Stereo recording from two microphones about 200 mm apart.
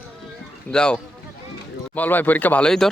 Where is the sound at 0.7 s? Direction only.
5° left (ahead or behind).